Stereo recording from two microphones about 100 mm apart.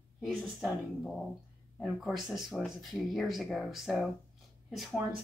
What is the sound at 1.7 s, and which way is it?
Speech, centre (ahead or behind).